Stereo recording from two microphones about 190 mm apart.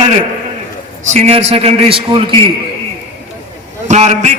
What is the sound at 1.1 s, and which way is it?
A man's voice, 35° right (ahead or behind).